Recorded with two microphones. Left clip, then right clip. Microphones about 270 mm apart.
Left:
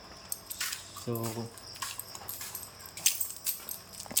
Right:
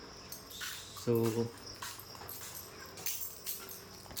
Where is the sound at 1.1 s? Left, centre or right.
Centre.